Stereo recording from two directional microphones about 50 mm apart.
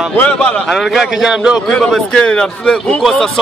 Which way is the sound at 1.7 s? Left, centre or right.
Centre.